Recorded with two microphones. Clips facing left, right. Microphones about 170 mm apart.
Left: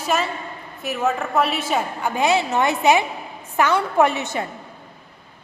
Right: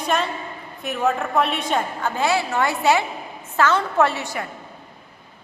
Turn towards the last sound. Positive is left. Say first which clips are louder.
# left 2 dB
turn(degrees=20)  # may be behind; listen again after turning